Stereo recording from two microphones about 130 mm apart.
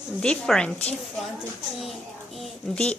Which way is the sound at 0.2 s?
5° left (ahead or behind).